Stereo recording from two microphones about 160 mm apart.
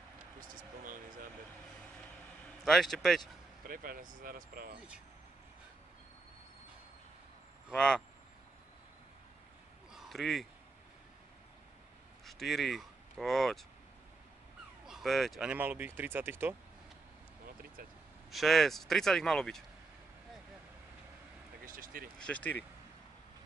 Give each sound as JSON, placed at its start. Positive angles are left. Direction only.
{"t": 0.4, "sound": "vehicle", "side_deg": -60}
{"t": 2.6, "sound": "speech", "side_deg": 0}
{"t": 3.6, "sound": "speech", "side_deg": -65}
{"t": 7.7, "sound": "speech", "side_deg": 5}
{"t": 9.9, "sound": "a sound", "side_deg": 0}
{"t": 12.3, "sound": "speech", "side_deg": 0}
{"t": 14.9, "sound": "speech", "side_deg": 0}
{"t": 15.5, "sound": "speech", "side_deg": -10}
{"t": 18.3, "sound": "speech", "side_deg": 0}
{"t": 21.6, "sound": "a sound", "side_deg": -60}
{"t": 22.2, "sound": "speech", "side_deg": 10}